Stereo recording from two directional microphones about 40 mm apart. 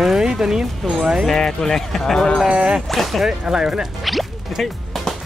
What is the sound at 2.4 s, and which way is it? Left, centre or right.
Speech, right.